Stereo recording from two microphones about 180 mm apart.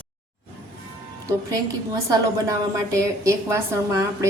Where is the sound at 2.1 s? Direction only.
20° right (ahead or behind).